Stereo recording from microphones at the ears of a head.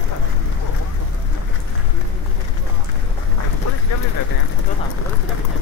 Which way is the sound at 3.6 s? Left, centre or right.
Left.